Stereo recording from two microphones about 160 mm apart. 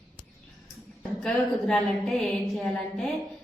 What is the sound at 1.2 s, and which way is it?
Speech, 5° left (ahead or behind).